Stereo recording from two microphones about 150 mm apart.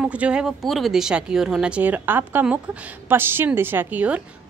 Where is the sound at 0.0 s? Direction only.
5° right (ahead or behind).